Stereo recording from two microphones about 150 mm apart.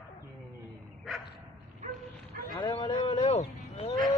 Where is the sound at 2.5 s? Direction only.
30° left (ahead or behind).